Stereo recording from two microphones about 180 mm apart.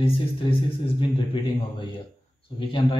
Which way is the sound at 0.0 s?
30° left (ahead or behind).